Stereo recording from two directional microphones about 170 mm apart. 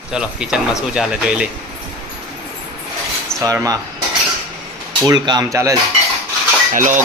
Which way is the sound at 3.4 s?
20° right (ahead or behind).